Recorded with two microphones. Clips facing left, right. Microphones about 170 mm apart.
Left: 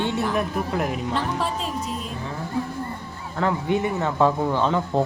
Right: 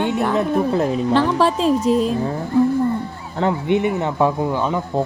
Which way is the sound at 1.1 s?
90° right.